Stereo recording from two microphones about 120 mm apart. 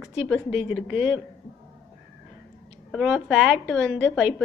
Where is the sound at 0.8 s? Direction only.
10° right (ahead or behind).